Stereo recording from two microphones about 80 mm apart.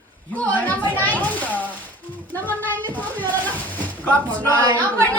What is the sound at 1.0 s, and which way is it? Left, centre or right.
Children playing, left.